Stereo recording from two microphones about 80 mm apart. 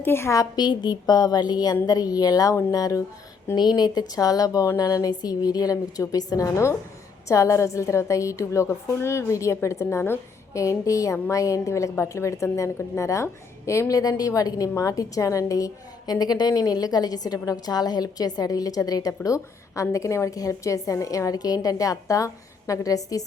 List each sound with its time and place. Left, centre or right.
0.0 s a woman's voice: left
0.3 s a woman's voice: left
3.5 s a woman's voice: left